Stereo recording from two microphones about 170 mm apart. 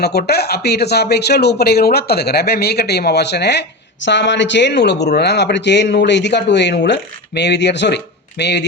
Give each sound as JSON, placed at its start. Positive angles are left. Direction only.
{"t": 0.0, "sound": "speech", "side_deg": 70}